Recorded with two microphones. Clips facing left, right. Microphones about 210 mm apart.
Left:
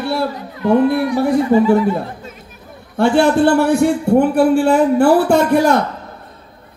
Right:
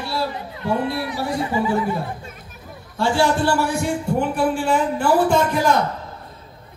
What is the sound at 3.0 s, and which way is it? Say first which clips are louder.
Speech: left 7 dB; 60° left (ahead or behind).